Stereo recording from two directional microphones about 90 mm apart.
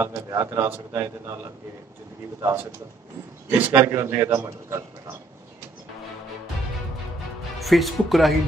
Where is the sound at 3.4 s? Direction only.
20° right (ahead or behind).